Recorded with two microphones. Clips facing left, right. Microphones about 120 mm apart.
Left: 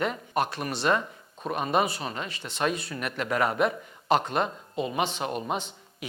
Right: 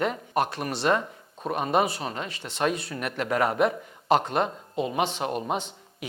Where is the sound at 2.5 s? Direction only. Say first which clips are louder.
Right 2 dB; 55° right (ahead or behind); by 3.8 s 35° right (ahead or behind).